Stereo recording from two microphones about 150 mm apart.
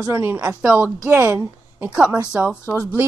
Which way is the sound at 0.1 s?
15° right (ahead or behind).